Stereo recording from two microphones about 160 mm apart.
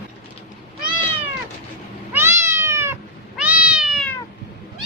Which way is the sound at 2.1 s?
15° right (ahead or behind).